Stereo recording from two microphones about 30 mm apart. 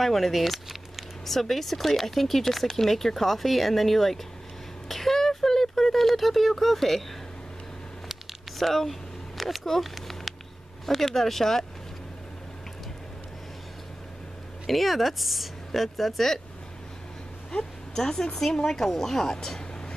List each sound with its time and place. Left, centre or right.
0.0 s speech: centre
1.2 s speech: centre
4.8 s a sound: centre
8.1 s a sound: centre
10.9 s speech: centre
14.7 s speech: centre
17.5 s speech: left